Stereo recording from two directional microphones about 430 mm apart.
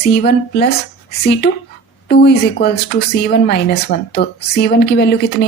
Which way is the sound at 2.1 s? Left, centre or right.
Left.